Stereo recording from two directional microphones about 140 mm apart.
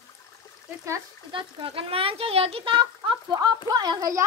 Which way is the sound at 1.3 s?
40° right (ahead or behind).